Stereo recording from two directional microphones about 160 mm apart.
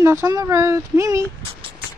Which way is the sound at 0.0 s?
15° right (ahead or behind).